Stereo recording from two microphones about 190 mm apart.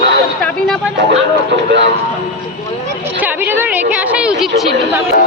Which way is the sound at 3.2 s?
10° right (ahead or behind).